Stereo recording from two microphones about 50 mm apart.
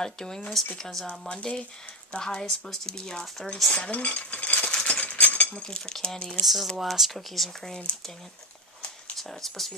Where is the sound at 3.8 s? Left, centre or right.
Left; by 6.2 s centre.